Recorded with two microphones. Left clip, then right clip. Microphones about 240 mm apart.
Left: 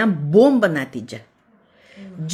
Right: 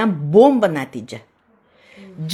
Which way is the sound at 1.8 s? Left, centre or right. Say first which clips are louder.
Right 1 dB; centre.